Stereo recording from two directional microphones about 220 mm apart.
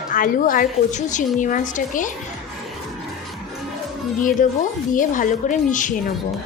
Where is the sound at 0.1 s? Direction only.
40° left (ahead or behind).